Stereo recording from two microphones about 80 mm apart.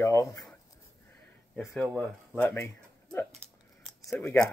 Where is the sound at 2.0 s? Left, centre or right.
Centre.